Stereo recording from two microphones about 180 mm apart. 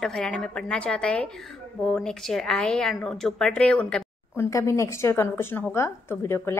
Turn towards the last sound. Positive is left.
turn(degrees=15)  # may be behind; listen again after turning